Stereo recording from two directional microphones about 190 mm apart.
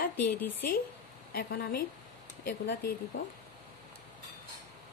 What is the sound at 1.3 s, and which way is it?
Speech, 55° left (ahead or behind).